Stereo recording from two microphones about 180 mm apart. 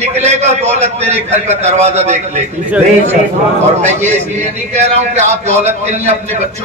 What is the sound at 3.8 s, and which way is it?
A man's voice, 40° right (ahead or behind).